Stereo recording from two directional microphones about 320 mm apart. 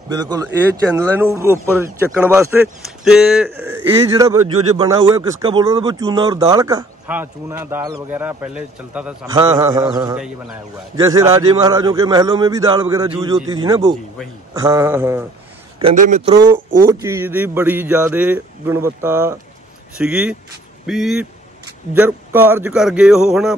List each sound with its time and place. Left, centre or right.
0.1 s speech: centre
15.8 s speech: right; by 23.5 s centre